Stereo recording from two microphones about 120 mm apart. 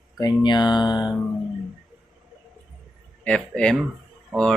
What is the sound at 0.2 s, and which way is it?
Speech, 35° left (ahead or behind).